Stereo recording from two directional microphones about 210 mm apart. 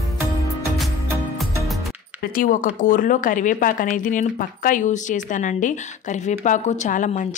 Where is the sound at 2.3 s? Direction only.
40° left (ahead or behind).